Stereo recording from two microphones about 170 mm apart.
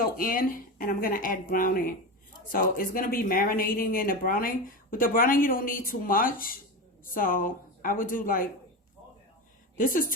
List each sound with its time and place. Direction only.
0.0 s speech: 55° left (ahead or behind)
9.7 s speech: 55° left (ahead or behind)